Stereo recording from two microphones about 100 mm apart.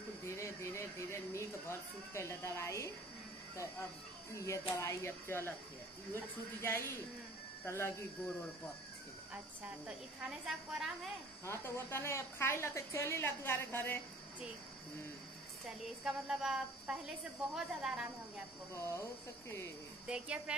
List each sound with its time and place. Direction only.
0.2 s speech: 30° left (ahead or behind)
4.3 s speech: 30° left (ahead or behind)
10.4 s speech: 5° right (ahead or behind)
11.4 s speech: 25° left (ahead or behind)
16.0 s speech: 5° right (ahead or behind)
18.8 s speech: 30° left (ahead or behind)
20.1 s speech: 10° right (ahead or behind)